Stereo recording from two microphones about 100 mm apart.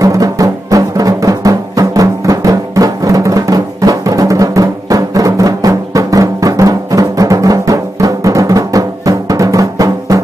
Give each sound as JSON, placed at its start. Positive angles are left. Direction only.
{"t": 0.0, "sound": "music", "side_deg": -35}